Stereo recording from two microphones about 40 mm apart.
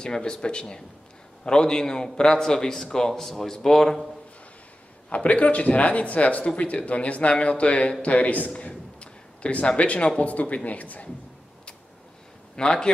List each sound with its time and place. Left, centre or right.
0.0 s a man's voice: centre
5.1 s speech: left
8.5 s a sound: left
10.2 s speech: left
12.5 s speech: centre